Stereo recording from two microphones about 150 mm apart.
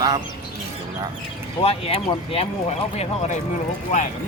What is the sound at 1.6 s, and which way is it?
Speech, 40° left (ahead or behind).